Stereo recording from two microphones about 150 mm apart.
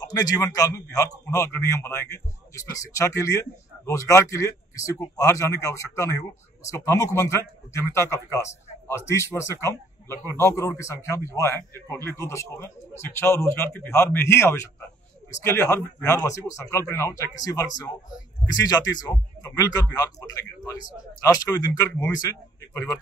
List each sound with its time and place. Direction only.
0.0 s a man's voice: 25° left (ahead or behind)
10.1 s a man's voice: 20° right (ahead or behind)
10.4 s a man's voice: 20° left (ahead or behind)